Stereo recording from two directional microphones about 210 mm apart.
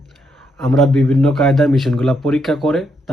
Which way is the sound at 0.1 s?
5° left (ahead or behind).